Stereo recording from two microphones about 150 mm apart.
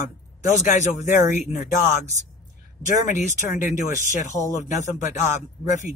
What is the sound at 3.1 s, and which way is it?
Speech, 55° left (ahead or behind).